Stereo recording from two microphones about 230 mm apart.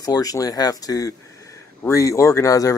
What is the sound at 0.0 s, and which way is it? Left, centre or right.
Speech, centre.